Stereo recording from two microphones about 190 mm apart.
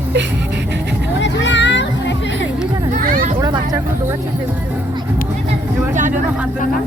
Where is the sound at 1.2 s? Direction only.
70° left (ahead or behind).